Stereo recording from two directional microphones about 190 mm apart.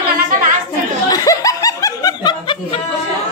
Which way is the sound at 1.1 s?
20° left (ahead or behind).